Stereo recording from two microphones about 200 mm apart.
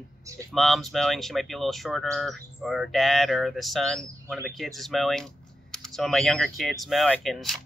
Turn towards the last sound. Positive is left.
turn(degrees=0)  # may be behind; listen again after turning